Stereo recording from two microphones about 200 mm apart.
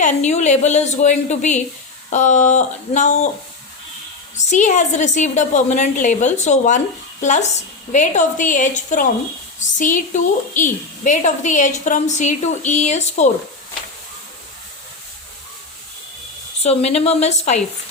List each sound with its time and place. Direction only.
0.0 s a woman's voice: 35° left (ahead or behind)
4.4 s a woman's voice: 35° left (ahead or behind)
16.6 s a woman's voice: 30° left (ahead or behind)